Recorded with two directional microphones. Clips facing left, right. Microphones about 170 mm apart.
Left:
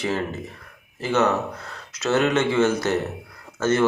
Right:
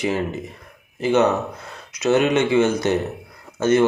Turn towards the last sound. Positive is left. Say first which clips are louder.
# right 4 dB
turn(degrees=-15)  # may be behind; listen again after turning